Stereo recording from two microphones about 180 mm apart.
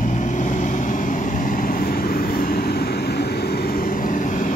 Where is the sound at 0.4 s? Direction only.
45° left (ahead or behind).